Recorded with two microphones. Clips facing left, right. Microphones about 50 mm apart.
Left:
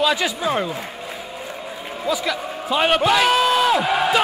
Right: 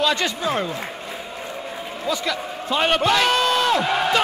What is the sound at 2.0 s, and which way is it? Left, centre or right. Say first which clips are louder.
A man's voice: left 2 dB; centre.